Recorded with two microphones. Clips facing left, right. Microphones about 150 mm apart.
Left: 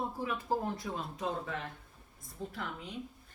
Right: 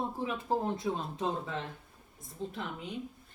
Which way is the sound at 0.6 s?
30° right (ahead or behind).